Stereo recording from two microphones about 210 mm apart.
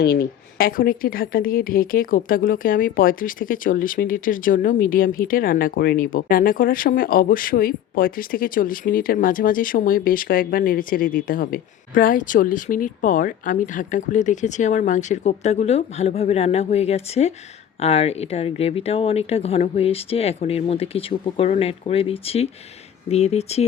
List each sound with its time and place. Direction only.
0.0 s a woman's voice: 50° left (ahead or behind); by 23.6 s 30° left (ahead or behind)